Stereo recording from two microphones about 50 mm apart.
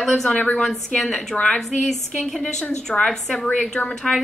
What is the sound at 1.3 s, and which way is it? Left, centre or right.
A woman's voice, left.